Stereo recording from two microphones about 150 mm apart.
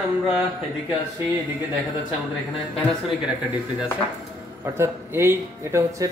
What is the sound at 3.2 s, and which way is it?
Speech, 5° right (ahead or behind).